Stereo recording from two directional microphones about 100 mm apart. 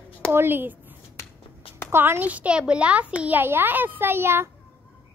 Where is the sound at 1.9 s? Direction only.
20° right (ahead or behind).